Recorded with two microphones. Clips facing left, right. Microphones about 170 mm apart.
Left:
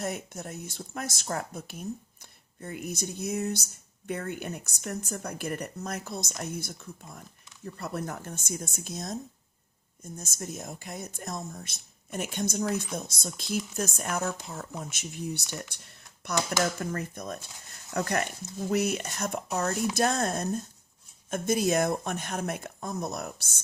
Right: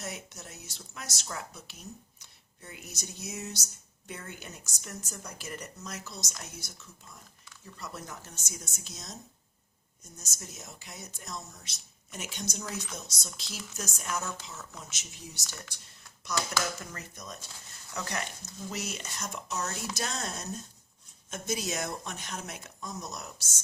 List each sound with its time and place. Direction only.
0.0 s speech: 55° left (ahead or behind)